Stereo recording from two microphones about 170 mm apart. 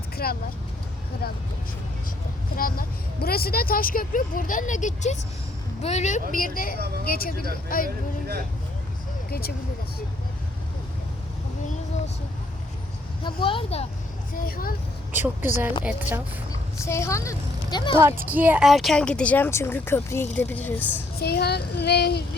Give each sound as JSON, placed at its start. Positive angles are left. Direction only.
{"t": 0.2, "sound": "speech", "side_deg": 60}
{"t": 2.6, "sound": "speech", "side_deg": 55}
{"t": 6.7, "sound": "speech", "side_deg": -65}
{"t": 7.0, "sound": "speech", "side_deg": 60}
{"t": 7.9, "sound": "speech", "side_deg": -60}
{"t": 13.2, "sound": "a woman's voice", "side_deg": 30}
{"t": 14.3, "sound": "speech", "side_deg": 60}
{"t": 15.8, "sound": "a woman's voice", "side_deg": -10}
{"t": 16.7, "sound": "a woman's voice", "side_deg": 15}
{"t": 17.9, "sound": "a woman's voice", "side_deg": -15}
{"t": 21.2, "sound": "speech", "side_deg": 70}